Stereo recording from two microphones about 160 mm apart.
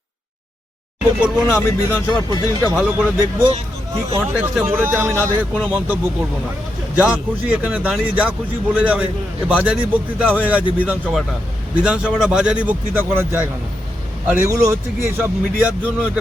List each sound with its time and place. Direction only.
1.2 s speech: 15° left (ahead or behind)
2.7 s a man's voice: 10° right (ahead or behind)
4.4 s a man's voice: 10° right (ahead or behind)
5.1 s speech: 10° left (ahead or behind)
5.6 s a man's voice: 10° right (ahead or behind)